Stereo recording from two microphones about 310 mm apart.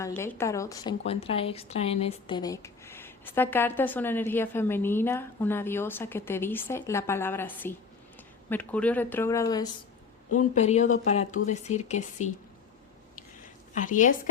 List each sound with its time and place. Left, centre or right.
0.0 s a woman's voice: centre
10.3 s speech: left
13.7 s speech: left